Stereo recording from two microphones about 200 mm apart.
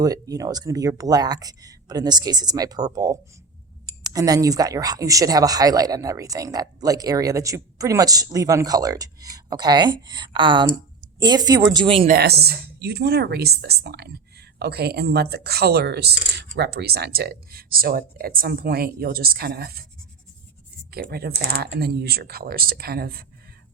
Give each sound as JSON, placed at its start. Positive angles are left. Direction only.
{"t": 0.0, "sound": "speech", "side_deg": -20}
{"t": 12.0, "sound": "speech", "side_deg": -50}
{"t": 20.9, "sound": "speech", "side_deg": -50}